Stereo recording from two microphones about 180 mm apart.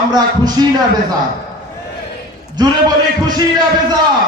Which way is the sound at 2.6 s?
20° right (ahead or behind).